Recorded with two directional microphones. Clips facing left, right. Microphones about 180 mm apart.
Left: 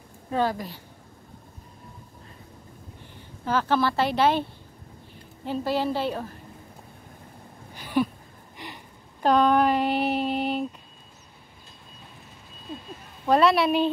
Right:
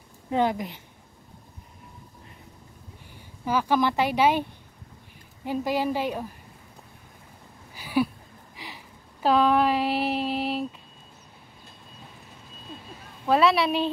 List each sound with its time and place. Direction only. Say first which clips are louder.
0.3 s a woman's voice: right 1 dB; 20° right (ahead or behind)
3.4 s speech: even; 10° right (ahead or behind)
7.7 s a sound: even; 10° right (ahead or behind)
13.3 s a woman's voice: left 1 dB; centre (ahead or behind)